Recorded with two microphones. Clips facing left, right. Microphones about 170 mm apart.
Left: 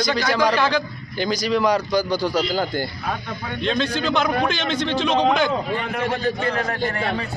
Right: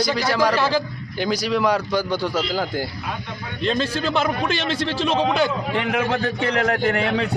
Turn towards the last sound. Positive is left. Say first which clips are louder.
# right 4 dB
turn(degrees=-85)